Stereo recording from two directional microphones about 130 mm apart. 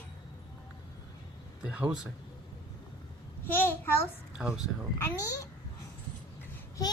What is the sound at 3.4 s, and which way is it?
Speech, 15° left (ahead or behind).